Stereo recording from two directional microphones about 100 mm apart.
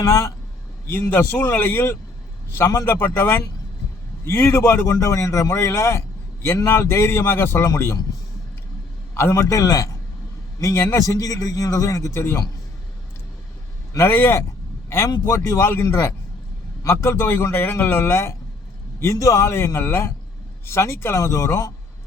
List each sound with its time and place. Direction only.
0.0 s a man's voice: 30° left (ahead or behind)
9.1 s a man's voice: 25° left (ahead or behind)
13.9 s a man's voice: 25° left (ahead or behind)